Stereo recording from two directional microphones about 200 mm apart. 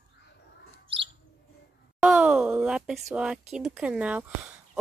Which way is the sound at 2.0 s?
5° right (ahead or behind).